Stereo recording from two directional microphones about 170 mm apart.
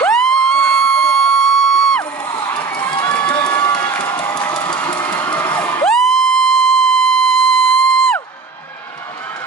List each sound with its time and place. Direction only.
0.0 s a sound: 5° left (ahead or behind)
2.3 s run: 15° left (ahead or behind)
2.9 s crowd: 25° left (ahead or behind)
4.2 s a sound: 25° left (ahead or behind)
5.0 s music: 10° left (ahead or behind)
5.9 s music: centre (ahead or behind)